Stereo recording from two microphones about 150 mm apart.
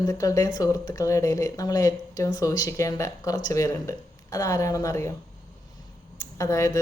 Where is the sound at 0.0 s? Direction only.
20° left (ahead or behind).